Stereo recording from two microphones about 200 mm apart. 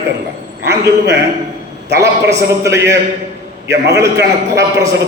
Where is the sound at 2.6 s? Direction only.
15° right (ahead or behind).